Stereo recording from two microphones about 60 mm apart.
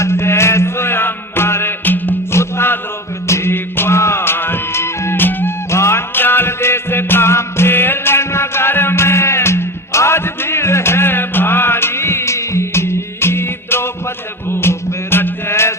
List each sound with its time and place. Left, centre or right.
0.0 s mantra: left
1.8 s music: left
2.3 s music: left
5.7 s music: left
6.1 s music: left